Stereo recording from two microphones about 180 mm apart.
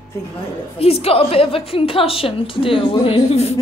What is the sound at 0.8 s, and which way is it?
A woman's voice, 35° left (ahead or behind).